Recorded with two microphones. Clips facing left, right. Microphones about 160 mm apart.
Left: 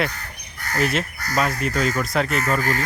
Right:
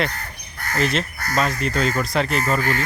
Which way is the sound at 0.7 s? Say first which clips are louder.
Even; 10° left (ahead or behind).